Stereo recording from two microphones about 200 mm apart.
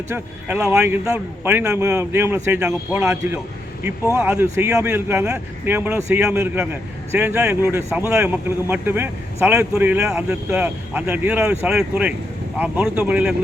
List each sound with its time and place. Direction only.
0.1 s speech: 10° right (ahead or behind)